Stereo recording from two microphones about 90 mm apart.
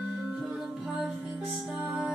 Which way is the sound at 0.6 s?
5° right (ahead or behind).